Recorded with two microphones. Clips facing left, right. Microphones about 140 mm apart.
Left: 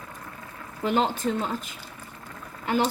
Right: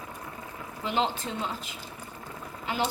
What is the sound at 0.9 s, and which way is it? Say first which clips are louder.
Speech: left 5 dB; 45° left (ahead or behind).